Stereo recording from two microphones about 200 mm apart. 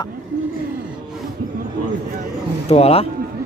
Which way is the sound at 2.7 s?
30° left (ahead or behind).